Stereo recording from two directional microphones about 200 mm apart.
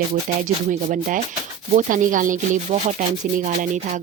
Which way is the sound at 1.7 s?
40° right (ahead or behind).